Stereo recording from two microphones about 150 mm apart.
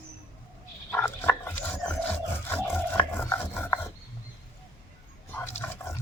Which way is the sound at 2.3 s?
15° left (ahead or behind).